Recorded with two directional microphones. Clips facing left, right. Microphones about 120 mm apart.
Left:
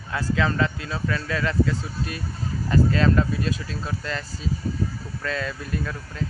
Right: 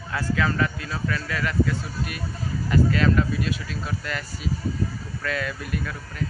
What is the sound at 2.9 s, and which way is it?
Speech, 30° left (ahead or behind).